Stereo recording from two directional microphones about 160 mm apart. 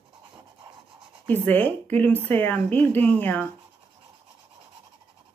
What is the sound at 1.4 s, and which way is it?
Speech, 10° left (ahead or behind).